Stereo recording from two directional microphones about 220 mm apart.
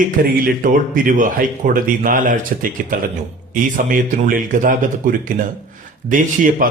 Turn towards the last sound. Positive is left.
turn(degrees=-40)  # may be behind; listen again after turning